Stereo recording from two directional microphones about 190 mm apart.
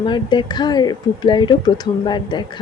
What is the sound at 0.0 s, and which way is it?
Speech, 25° left (ahead or behind).